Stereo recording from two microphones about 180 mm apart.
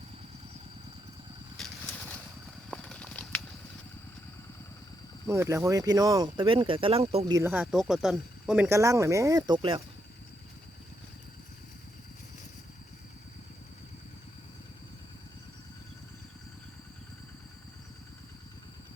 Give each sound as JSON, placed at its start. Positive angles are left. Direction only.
{"t": 2.6, "sound": "a sound", "side_deg": 5}
{"t": 5.3, "sound": "speech", "side_deg": -15}
{"t": 7.3, "sound": "speech", "side_deg": -15}